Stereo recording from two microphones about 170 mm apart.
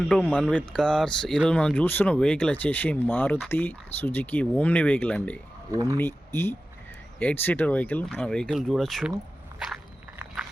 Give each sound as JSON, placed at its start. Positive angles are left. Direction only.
{"t": 0.1, "sound": "speech", "side_deg": 5}
{"t": 5.7, "sound": "speech", "side_deg": -20}
{"t": 6.0, "sound": "speech", "side_deg": 15}
{"t": 9.6, "sound": "walk", "side_deg": 0}